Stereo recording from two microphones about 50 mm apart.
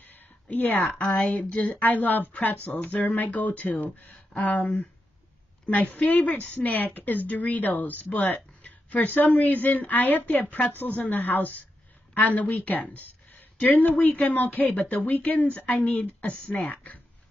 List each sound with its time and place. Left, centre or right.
0.0 s a sound: left
0.8 s a woman's voice: centre
1.5 s speech: left
16.4 s a woman's voice: centre
16.7 s speech: left